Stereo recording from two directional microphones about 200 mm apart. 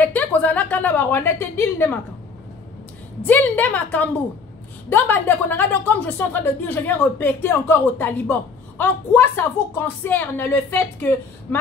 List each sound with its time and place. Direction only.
0.0 s a woman's voice: 10° left (ahead or behind)
3.2 s speech: 10° left (ahead or behind)